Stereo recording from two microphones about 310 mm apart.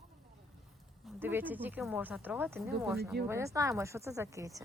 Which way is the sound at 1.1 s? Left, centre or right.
Centre.